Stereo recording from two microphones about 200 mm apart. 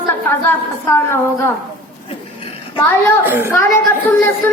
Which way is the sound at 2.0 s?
25° left (ahead or behind).